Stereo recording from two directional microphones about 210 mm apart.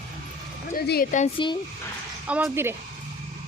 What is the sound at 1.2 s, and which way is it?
Speech, 25° left (ahead or behind).